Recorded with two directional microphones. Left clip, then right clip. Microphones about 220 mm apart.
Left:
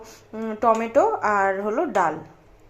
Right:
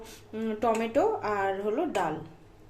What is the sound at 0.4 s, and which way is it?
Speech, centre (ahead or behind).